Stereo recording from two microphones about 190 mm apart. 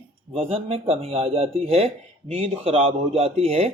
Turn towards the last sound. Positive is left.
turn(degrees=-30)  # may be behind; listen again after turning